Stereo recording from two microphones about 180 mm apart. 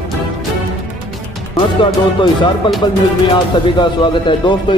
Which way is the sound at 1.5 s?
25° left (ahead or behind).